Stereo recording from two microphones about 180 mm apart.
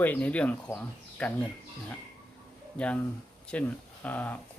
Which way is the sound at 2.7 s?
5° left (ahead or behind).